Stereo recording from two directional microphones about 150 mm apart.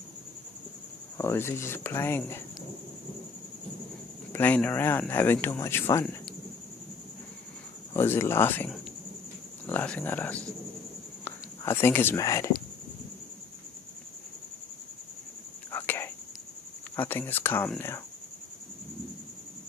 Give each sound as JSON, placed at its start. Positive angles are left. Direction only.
{"t": 1.1, "sound": "speech", "side_deg": 15}
{"t": 4.3, "sound": "speech", "side_deg": 10}
{"t": 7.9, "sound": "speech", "side_deg": 15}
{"t": 15.7, "sound": "a sound", "side_deg": 15}
{"t": 16.9, "sound": "speech", "side_deg": 10}